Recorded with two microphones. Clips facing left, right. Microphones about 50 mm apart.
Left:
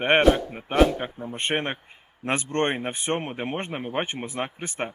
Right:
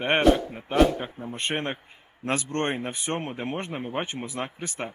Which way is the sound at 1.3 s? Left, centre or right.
Left.